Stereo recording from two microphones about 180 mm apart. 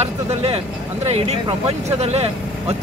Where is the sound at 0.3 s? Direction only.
35° right (ahead or behind).